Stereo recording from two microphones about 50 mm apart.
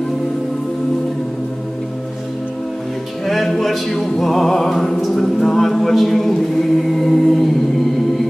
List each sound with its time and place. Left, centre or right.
3.3 s music: centre
7.1 s a capella: centre